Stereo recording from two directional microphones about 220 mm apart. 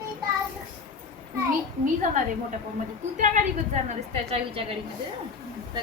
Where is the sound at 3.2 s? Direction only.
35° right (ahead or behind).